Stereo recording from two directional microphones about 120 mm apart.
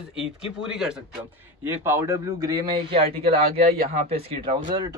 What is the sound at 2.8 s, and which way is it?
Speech, 55° right (ahead or behind).